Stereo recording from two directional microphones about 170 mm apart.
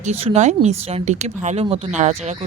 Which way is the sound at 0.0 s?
40° right (ahead or behind).